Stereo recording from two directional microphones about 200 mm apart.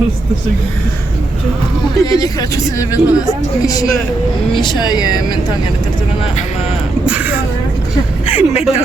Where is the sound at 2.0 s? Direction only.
15° left (ahead or behind).